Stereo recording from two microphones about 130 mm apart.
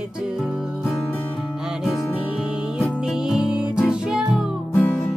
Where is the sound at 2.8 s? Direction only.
5° right (ahead or behind).